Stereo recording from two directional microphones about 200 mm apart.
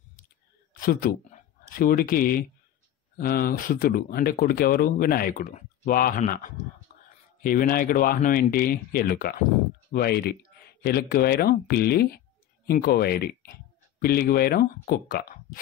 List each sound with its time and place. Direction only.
0.7 s speech: 45° left (ahead or behind)